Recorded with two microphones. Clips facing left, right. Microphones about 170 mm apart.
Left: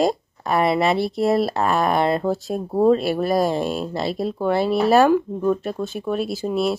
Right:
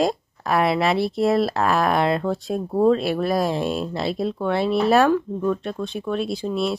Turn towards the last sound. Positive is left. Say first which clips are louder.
# left 2 dB
turn(degrees=0)  # may be behind; listen again after turning